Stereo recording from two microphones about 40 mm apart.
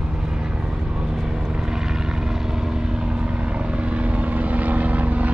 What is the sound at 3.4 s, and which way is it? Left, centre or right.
Vehicle, right.